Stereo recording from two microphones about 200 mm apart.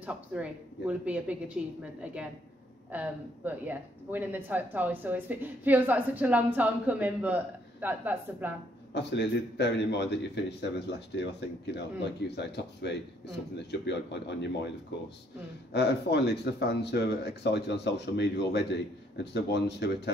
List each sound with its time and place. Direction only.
0.0 s speech: 5° right (ahead or behind)
2.9 s speech: 10° right (ahead or behind)
8.9 s speech: 60° left (ahead or behind)
15.7 s speech: 55° left (ahead or behind)